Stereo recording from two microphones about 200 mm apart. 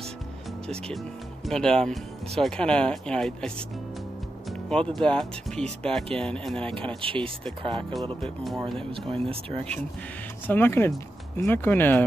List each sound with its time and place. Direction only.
0.7 s speech: centre (ahead or behind)
7.0 s speech: 25° right (ahead or behind)
8.6 s speech: centre (ahead or behind)
9.1 s speech: 30° right (ahead or behind)
10.4 s speech: 10° left (ahead or behind)